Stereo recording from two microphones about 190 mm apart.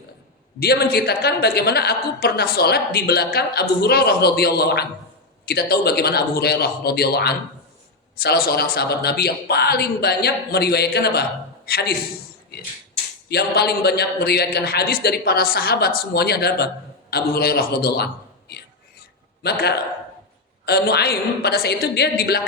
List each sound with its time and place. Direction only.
0.6 s a woman's voice: 55° left (ahead or behind)
13.2 s a woman's voice: 60° left (ahead or behind)